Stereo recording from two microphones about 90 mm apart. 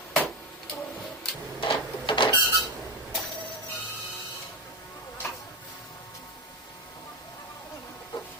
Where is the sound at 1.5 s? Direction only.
70° left (ahead or behind).